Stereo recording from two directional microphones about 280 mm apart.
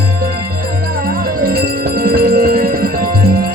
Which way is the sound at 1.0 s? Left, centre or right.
Right.